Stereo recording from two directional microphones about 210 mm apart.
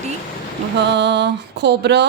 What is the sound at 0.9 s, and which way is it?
A woman's voice, 55° right (ahead or behind).